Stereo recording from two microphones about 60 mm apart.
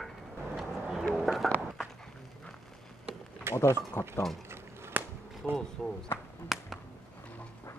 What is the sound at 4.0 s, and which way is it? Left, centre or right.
Speech, left.